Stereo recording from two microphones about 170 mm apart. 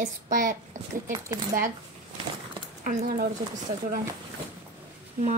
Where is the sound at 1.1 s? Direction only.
20° right (ahead or behind).